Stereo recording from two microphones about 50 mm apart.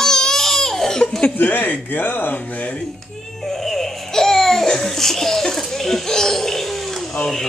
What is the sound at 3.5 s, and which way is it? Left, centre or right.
Speech, centre.